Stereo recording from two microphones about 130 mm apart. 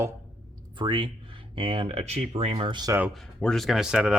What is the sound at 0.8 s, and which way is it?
Speech, 35° right (ahead or behind).